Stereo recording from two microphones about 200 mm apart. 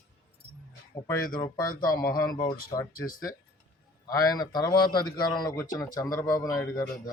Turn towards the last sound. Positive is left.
turn(degrees=15)  # may be behind; listen again after turning